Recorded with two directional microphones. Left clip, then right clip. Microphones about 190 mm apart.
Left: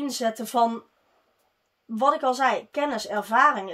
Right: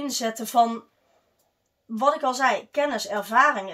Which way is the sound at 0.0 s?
45° left (ahead or behind).